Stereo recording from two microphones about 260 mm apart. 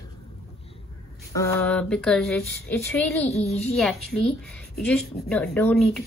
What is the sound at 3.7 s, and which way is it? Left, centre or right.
Speech, centre.